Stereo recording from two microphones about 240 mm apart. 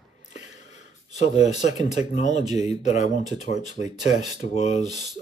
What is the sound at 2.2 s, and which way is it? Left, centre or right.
Speech, left.